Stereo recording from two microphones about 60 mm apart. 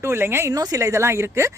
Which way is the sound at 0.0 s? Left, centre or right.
Right.